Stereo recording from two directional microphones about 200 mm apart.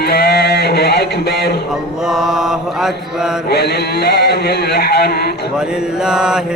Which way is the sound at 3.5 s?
55° left (ahead or behind).